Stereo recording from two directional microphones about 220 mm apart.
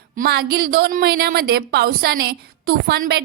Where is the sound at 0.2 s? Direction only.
45° right (ahead or behind).